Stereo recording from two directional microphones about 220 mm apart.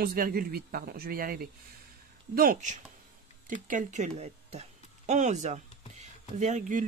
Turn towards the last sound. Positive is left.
turn(degrees=-35)  # may be behind; listen again after turning